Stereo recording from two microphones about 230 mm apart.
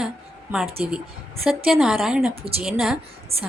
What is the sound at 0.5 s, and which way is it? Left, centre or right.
Speech, centre.